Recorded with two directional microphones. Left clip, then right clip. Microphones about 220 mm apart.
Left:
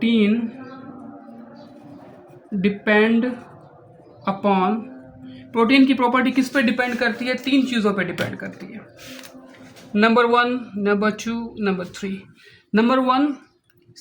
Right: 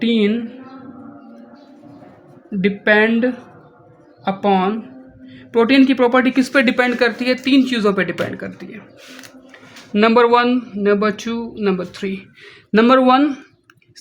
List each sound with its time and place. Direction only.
0.0 s a sound: 45° right (ahead or behind)
2.6 s speech: 45° right (ahead or behind)
9.9 s speech: 30° right (ahead or behind)
12.7 s speech: 45° right (ahead or behind)